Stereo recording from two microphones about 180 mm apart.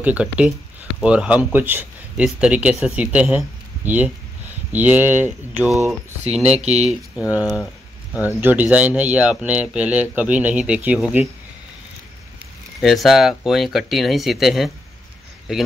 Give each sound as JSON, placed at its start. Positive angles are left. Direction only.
{"t": 0.0, "sound": "speech", "side_deg": -5}
{"t": 6.6, "sound": "speech", "side_deg": -40}
{"t": 6.9, "sound": "speech", "side_deg": -5}
{"t": 12.8, "sound": "speech", "side_deg": 0}